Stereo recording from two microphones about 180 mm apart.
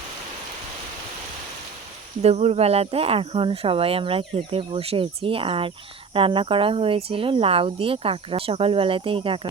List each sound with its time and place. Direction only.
2.2 s speech: 35° right (ahead or behind)